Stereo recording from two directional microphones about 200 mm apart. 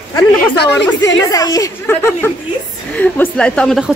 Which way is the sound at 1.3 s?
20° left (ahead or behind).